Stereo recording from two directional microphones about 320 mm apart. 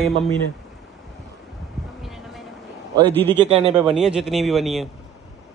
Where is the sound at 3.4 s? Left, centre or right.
Centre.